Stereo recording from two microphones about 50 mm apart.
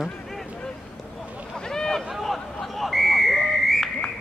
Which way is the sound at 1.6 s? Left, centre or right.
Centre.